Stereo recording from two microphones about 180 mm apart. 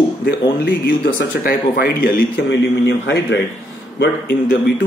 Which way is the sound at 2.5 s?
80° left.